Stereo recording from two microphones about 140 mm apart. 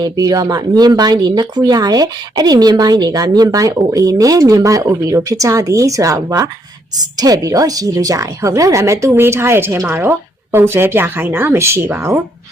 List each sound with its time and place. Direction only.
0.0 s speech: 25° right (ahead or behind)